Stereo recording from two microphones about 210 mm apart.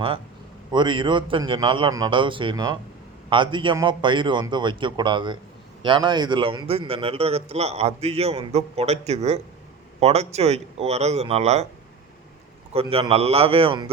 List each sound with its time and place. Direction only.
0.7 s a man's voice: 20° right (ahead or behind)
12.7 s a man's voice: 25° right (ahead or behind)